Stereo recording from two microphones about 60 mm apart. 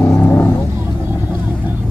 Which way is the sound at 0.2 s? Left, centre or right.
Left.